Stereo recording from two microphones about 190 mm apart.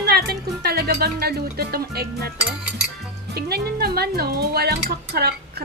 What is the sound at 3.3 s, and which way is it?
Speech, 55° right (ahead or behind).